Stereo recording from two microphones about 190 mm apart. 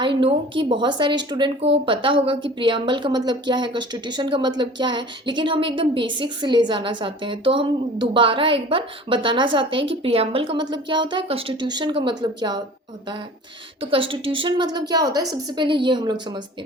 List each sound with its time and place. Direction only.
0.0 s a woman's voice: 25° right (ahead or behind)
13.9 s a woman's voice: 30° right (ahead or behind)